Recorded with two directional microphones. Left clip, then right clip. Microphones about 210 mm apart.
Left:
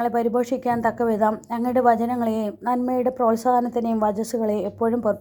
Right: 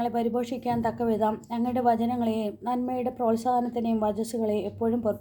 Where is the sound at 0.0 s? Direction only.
25° left (ahead or behind).